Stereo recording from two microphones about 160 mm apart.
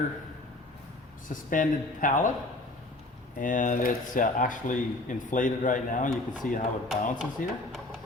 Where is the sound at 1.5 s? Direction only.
55° left (ahead or behind).